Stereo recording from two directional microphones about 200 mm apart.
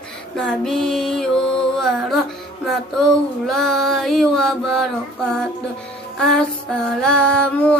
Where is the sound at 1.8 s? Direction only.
Centre (ahead or behind).